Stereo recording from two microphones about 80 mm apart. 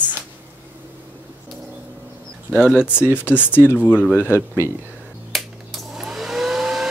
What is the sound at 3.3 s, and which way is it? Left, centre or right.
Speech, left.